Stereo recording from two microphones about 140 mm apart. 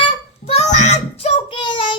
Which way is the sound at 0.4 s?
50° left (ahead or behind).